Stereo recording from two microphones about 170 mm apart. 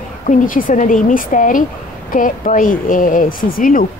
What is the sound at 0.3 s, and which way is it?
A woman's voice, 50° left (ahead or behind).